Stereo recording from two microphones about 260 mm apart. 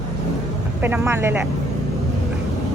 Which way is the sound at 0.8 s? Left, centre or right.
Centre.